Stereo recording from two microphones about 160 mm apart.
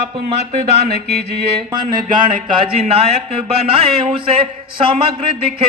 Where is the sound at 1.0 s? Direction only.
90° right.